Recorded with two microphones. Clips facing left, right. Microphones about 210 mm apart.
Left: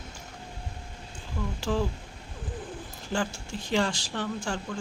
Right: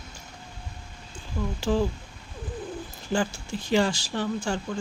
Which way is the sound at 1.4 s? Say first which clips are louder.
Right 3 dB; 25° right (ahead or behind).